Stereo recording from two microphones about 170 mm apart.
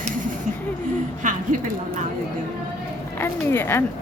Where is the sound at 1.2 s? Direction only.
50° right (ahead or behind).